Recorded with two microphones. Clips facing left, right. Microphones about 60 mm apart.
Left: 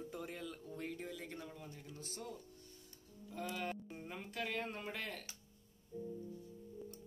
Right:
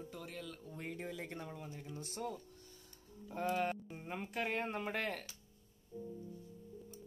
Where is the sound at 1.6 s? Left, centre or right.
Centre.